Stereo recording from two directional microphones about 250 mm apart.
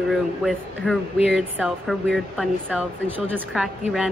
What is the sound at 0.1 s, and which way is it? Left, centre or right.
Speech, centre.